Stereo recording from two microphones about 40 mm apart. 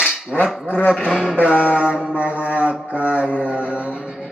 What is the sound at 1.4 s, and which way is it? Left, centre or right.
Mantra, left.